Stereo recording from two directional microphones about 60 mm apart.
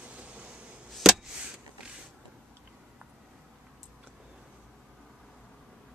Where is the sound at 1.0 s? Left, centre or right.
Centre.